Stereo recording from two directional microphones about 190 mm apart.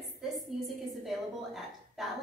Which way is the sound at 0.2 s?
Centre (ahead or behind).